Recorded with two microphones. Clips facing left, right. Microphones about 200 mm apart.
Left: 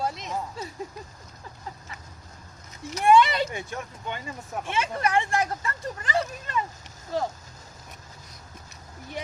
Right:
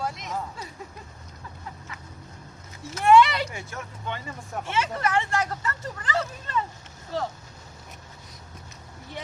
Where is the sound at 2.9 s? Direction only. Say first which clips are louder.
Right 1 dB; 15° left (ahead or behind).